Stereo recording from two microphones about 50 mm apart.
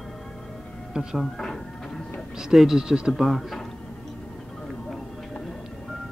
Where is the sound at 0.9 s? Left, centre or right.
Centre.